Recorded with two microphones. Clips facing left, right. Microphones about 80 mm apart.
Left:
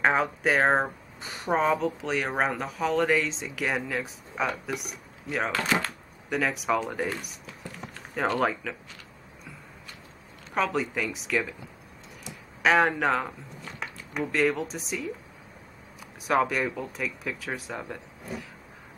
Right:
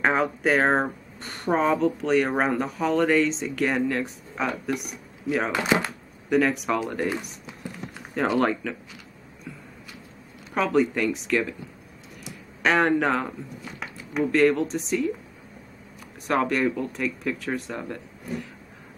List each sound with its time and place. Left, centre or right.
0.0 s speech: centre
5.5 s speech: centre
6.3 s speech: centre
7.4 s a sound: centre
8.4 s speech: centre
10.5 s speech: centre
16.3 s speech: centre